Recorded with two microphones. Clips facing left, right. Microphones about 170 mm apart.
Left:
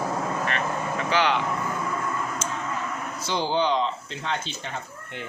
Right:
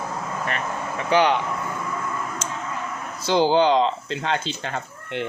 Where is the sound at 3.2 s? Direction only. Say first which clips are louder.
Right 7 dB; 90° right; by 5.3 s 75° right (ahead or behind).